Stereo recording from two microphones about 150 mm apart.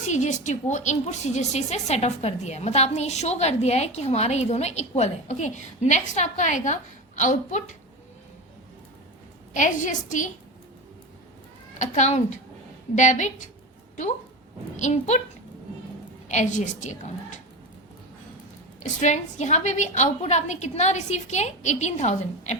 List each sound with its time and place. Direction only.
0.1 s a woman's voice: 55° left (ahead or behind)
9.5 s a woman's voice: 55° left (ahead or behind)
11.8 s a woman's voice: 50° left (ahead or behind)
14.8 s a woman's voice: 50° left (ahead or behind)
16.3 s a woman's voice: 55° left (ahead or behind)
18.8 s a woman's voice: 50° left (ahead or behind)